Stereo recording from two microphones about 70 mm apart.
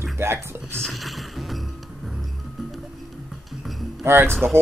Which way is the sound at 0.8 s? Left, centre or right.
Centre.